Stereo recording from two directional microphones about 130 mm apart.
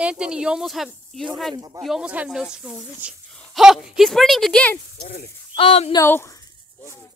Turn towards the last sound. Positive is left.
turn(degrees=20)  # may be behind; listen again after turning